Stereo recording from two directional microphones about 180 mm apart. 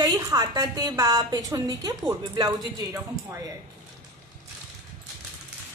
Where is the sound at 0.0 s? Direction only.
20° right (ahead or behind).